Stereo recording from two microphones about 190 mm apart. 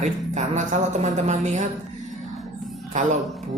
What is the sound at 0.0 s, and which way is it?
Speech, 40° right (ahead or behind).